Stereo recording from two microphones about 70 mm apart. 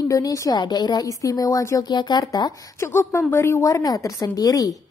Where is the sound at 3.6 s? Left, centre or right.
Left.